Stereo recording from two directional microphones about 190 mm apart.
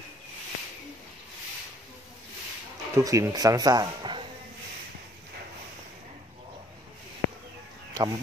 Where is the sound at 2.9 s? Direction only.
15° right (ahead or behind).